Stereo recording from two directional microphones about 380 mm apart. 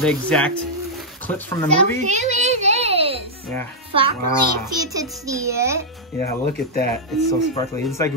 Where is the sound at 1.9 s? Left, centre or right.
Centre.